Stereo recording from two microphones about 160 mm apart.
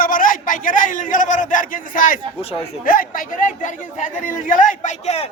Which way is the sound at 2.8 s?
60° left (ahead or behind).